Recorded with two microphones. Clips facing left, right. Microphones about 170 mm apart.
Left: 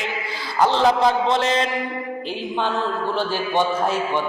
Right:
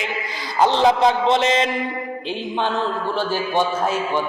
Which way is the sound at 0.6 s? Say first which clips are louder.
Right 1 dB; 25° right (ahead or behind).